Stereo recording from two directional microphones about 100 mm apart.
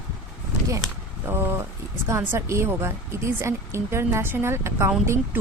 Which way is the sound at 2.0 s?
30° right (ahead or behind).